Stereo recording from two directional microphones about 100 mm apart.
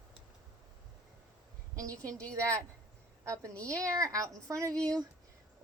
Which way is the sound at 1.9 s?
15° left (ahead or behind).